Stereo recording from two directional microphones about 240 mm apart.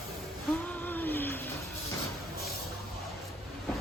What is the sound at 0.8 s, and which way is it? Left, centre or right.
Vehicle, centre.